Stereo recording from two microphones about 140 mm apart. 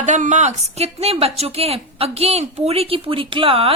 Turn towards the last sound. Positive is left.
turn(degrees=-40)  # may be behind; listen again after turning